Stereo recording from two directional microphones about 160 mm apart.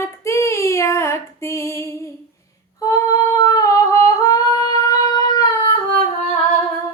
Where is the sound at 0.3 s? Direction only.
20° left (ahead or behind).